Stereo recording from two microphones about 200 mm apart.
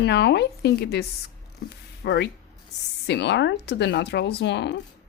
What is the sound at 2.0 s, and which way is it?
Speech, 55° left (ahead or behind).